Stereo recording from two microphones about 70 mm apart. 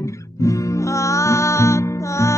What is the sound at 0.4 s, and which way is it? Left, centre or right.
Music, left.